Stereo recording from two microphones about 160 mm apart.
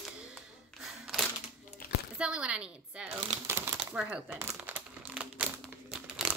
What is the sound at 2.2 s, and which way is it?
Speech, 5° right (ahead or behind).